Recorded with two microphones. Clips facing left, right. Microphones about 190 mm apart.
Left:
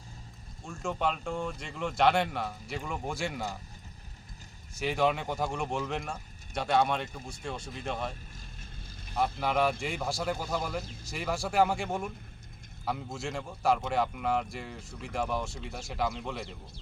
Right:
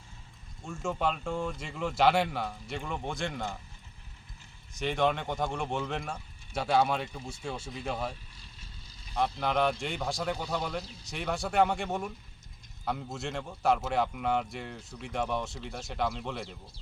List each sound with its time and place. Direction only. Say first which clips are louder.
0.6 s speech: even; 5° right (ahead or behind)
4.8 s speech: even; centre (ahead or behind)
8.4 s vehicle: left 4 dB; 50° left (ahead or behind)
9.4 s speech: even; 5° left (ahead or behind)